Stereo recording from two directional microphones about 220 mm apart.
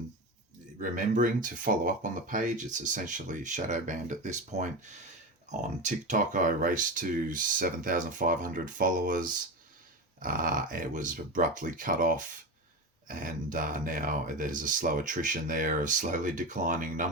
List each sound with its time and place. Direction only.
0.8 s speech: 35° right (ahead or behind)
5.8 s speech: 35° right (ahead or behind)